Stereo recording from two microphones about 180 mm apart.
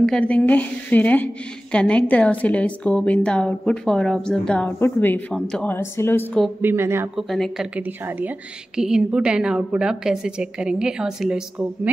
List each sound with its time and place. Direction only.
0.0 s speech: 5° left (ahead or behind)
6.6 s speech: 15° right (ahead or behind)
7.2 s a woman's voice: centre (ahead or behind)